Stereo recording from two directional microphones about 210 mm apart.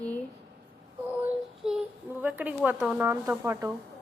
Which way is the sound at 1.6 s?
5° right (ahead or behind).